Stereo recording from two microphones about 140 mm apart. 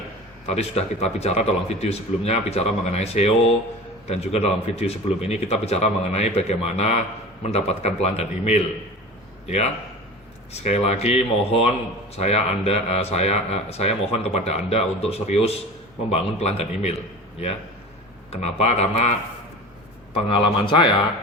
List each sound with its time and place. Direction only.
0.4 s speech: 50° left (ahead or behind)
10.5 s speech: 50° left (ahead or behind)
18.3 s speech: 50° left (ahead or behind)
20.3 s a man's voice: 35° left (ahead or behind)